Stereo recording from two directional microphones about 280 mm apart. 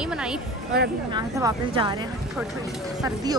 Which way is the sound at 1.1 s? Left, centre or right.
Centre.